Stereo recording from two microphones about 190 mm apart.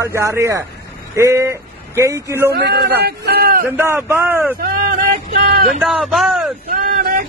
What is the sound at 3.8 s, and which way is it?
Speech, 15° right (ahead or behind).